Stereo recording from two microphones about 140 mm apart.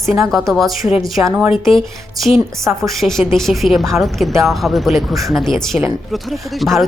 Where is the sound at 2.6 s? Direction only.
20° right (ahead or behind).